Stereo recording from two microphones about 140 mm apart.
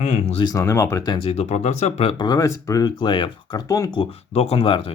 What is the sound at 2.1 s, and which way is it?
Speech, 30° left (ahead or behind).